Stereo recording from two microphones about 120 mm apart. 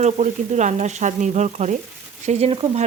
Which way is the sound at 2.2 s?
65° right (ahead or behind).